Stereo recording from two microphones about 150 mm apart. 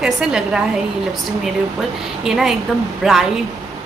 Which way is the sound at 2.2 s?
5° right (ahead or behind).